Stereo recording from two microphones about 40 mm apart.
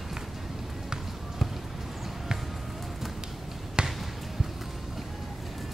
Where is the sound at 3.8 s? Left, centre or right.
Right.